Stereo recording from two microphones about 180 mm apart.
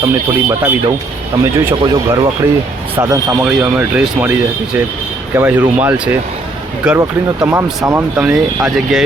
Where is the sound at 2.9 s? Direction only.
20° right (ahead or behind).